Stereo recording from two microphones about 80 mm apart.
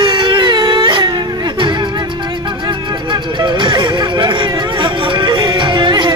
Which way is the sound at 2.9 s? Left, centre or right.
Right.